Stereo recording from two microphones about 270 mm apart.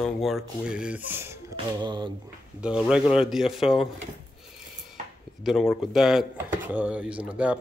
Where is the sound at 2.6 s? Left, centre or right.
Centre.